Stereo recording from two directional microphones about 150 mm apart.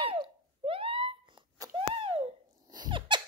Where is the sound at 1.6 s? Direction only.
25° right (ahead or behind).